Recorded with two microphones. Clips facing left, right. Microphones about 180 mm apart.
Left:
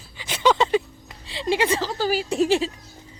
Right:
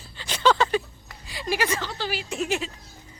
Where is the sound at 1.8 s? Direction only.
40° left (ahead or behind).